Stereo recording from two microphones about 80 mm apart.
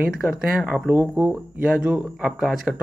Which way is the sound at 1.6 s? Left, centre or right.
Centre.